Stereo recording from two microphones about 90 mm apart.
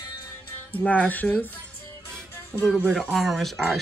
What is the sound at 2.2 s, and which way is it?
Music, 10° left (ahead or behind).